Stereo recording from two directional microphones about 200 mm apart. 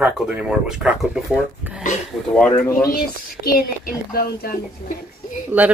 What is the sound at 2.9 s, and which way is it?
Speech, 50° left (ahead or behind).